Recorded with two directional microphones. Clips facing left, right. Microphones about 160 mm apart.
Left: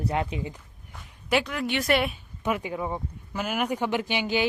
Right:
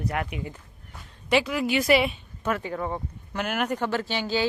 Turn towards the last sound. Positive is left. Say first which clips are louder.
# even
turn(degrees=15)  # may be behind; listen again after turning